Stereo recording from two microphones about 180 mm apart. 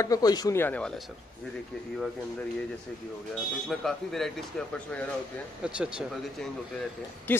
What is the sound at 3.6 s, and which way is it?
Speech, centre (ahead or behind).